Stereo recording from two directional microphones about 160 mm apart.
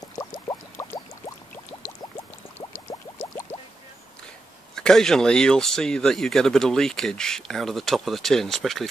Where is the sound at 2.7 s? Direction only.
15° left (ahead or behind).